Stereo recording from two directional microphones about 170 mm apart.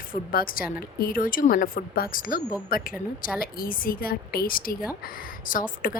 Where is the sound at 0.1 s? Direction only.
55° left (ahead or behind).